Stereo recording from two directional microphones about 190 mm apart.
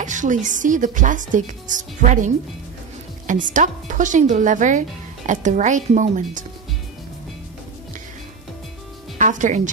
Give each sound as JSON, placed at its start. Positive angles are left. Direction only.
{"t": 0.0, "sound": "a woman's voice", "side_deg": -40}
{"t": 9.2, "sound": "speech", "side_deg": -40}